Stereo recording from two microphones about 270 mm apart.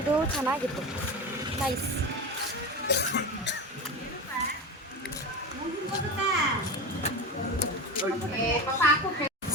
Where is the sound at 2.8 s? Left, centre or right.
Left.